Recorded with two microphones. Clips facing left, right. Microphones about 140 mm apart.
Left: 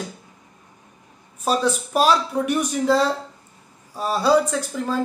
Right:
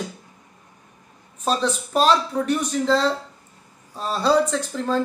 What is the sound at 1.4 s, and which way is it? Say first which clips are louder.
Speech: left 2 dB; 5° left (ahead or behind).